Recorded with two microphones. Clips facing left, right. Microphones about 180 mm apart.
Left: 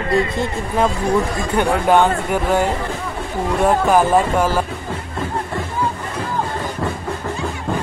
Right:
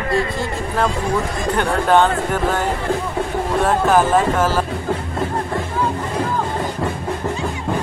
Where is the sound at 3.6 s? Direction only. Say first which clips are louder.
Left 1 dB; 15° left (ahead or behind).